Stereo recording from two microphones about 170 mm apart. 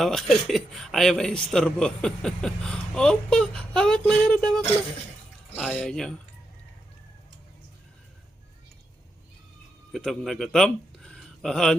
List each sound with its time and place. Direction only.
0.0 s a man's voice: centre (ahead or behind)
9.9 s speech: 5° left (ahead or behind)